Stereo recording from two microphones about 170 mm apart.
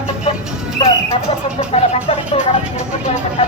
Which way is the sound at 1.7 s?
35° left (ahead or behind).